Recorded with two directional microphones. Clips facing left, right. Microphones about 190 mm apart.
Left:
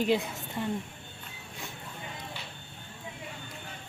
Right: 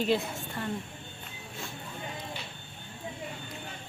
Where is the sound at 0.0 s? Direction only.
15° left (ahead or behind).